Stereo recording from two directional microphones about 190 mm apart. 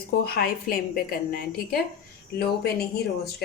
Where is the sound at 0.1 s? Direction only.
50° left (ahead or behind).